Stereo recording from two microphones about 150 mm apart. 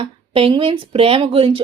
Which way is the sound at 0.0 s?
35° right (ahead or behind).